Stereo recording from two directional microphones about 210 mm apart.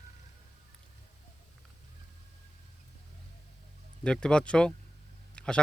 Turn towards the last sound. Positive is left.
turn(degrees=5)  # may be behind; listen again after turning